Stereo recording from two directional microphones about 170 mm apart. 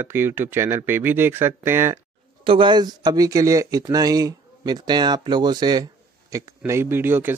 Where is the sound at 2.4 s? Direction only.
30° right (ahead or behind).